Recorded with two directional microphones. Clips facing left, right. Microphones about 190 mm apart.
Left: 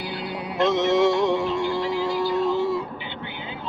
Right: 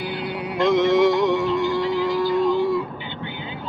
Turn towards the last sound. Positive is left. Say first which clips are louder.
# right 3 dB
turn(degrees=25)  # may be behind; listen again after turning